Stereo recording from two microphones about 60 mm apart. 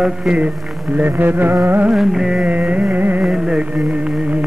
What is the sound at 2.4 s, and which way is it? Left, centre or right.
Carnatic music, right.